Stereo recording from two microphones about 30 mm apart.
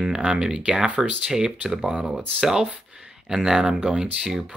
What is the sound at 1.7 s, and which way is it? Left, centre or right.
Speech, right.